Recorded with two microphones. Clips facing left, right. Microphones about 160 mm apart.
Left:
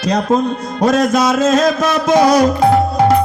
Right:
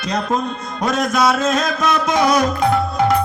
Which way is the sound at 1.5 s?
50° left (ahead or behind).